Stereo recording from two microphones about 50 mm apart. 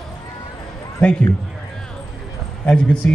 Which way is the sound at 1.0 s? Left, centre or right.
Left.